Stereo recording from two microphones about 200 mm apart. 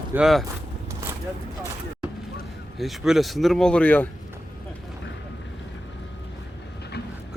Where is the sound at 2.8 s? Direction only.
Centre (ahead or behind).